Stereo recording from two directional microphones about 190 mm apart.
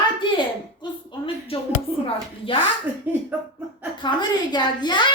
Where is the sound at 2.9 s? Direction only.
10° right (ahead or behind).